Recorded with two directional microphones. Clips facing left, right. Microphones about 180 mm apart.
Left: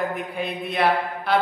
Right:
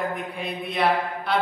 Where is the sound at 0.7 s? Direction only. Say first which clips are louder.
Left 1 dB; centre (ahead or behind).